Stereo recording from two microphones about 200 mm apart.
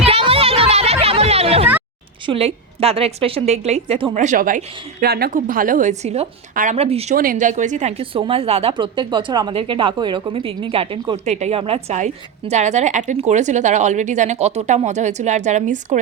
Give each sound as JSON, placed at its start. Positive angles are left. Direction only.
{"t": 0.0, "sound": "children playing", "side_deg": -30}
{"t": 2.2, "sound": "a woman's voice", "side_deg": -30}
{"t": 7.2, "sound": "a woman's voice", "side_deg": -40}